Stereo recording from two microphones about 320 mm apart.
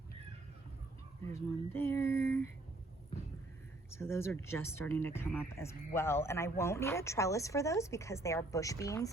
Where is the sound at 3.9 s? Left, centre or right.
Centre.